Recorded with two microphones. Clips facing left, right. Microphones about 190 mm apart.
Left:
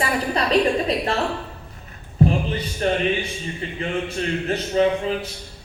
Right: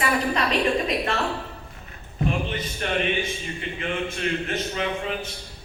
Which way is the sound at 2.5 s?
35° left (ahead or behind).